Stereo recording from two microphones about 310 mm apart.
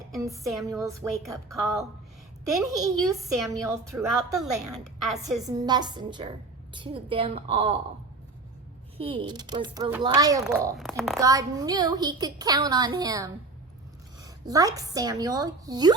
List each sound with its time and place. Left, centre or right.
0.4 s a woman's voice: centre
3.1 s a woman's voice: centre
5.4 s speech: centre
9.0 s speech: centre
11.2 s a woman's voice: centre